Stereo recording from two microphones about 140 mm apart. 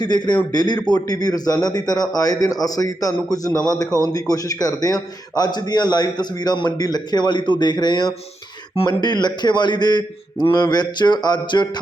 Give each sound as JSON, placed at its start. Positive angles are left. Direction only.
{"t": 0.0, "sound": "a man's voice", "side_deg": 30}